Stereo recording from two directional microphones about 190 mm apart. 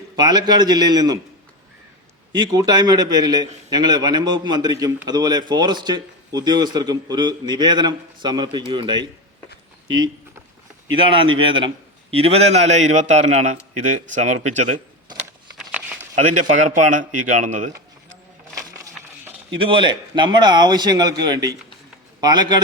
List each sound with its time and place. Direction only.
0.2 s speech: 20° right (ahead or behind)
2.3 s speech: 20° right (ahead or behind)
10.9 s a man's voice: 25° right (ahead or behind)
15.5 s a sound: 5° right (ahead or behind)
16.1 s a man's voice: 40° right (ahead or behind)
19.5 s speech: 25° right (ahead or behind)